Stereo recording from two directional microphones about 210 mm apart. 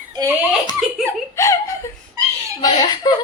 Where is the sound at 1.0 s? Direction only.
15° left (ahead or behind).